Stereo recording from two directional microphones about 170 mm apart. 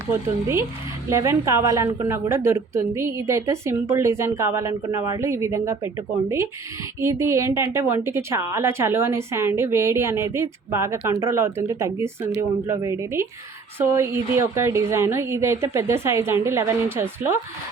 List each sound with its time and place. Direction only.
1.1 s a woman's voice: 15° right (ahead or behind)